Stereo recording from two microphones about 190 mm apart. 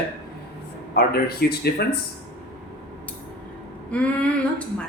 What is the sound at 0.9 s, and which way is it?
Speech, 55° left (ahead or behind).